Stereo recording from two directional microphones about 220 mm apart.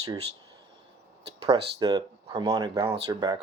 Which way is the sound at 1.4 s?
20° right (ahead or behind).